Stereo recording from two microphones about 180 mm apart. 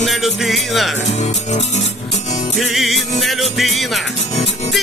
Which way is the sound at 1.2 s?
40° left (ahead or behind).